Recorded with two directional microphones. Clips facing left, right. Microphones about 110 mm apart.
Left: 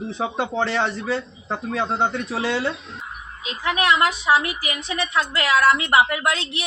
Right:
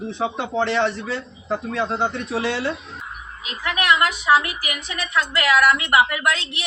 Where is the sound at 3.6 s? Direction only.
25° left (ahead or behind).